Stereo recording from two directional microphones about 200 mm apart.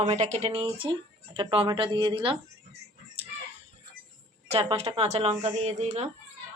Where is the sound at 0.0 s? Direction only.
35° right (ahead or behind).